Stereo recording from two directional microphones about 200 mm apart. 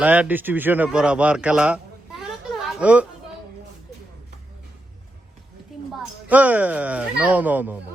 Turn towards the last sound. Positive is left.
turn(degrees=-10)  # may be behind; listen again after turning